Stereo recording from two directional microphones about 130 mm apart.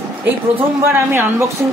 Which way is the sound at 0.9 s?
20° right (ahead or behind).